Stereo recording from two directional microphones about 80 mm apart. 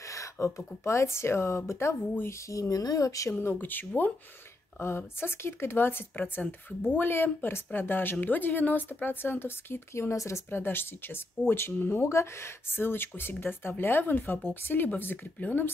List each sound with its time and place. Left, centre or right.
0.0 s a sound: left
0.8 s speech: left
3.3 s speech: left